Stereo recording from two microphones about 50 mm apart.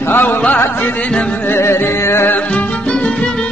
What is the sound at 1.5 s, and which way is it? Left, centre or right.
Music, left.